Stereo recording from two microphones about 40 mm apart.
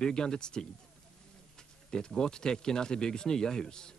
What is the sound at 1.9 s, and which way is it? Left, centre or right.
Speech, centre.